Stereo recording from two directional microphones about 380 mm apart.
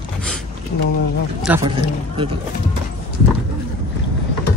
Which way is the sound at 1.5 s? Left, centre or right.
Centre.